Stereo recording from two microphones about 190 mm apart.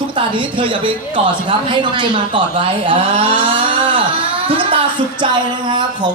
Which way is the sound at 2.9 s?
30° right (ahead or behind).